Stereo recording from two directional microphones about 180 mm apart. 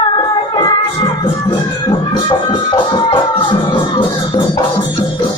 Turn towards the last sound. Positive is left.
turn(degrees=25)  # may be behind; listen again after turning